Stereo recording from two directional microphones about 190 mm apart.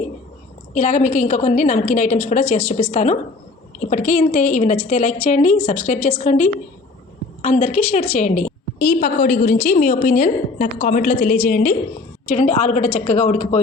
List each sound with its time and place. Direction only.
0.7 s a woman's voice: 40° left (ahead or behind)